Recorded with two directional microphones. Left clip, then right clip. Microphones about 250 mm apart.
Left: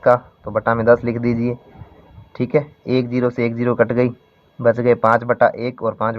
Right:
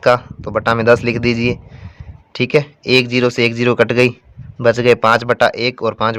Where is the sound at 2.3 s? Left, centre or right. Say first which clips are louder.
Right 4 dB; right.